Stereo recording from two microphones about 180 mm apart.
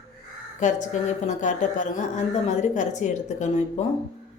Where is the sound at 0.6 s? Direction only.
45° left (ahead or behind).